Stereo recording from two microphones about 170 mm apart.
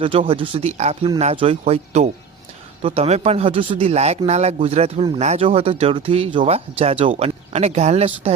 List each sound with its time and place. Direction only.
0.0 s speech: 30° right (ahead or behind)